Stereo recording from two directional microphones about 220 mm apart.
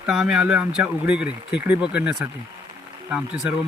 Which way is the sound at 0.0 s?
5° right (ahead or behind).